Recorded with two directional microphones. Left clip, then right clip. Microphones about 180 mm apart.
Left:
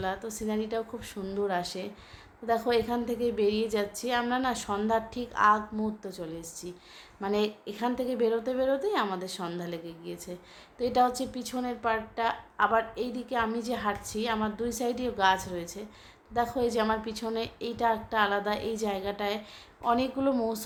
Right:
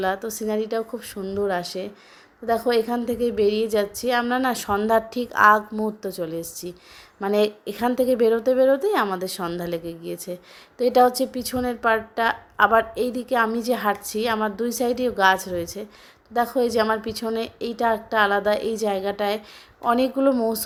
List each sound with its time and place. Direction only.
0.0 s a woman's voice: 30° right (ahead or behind)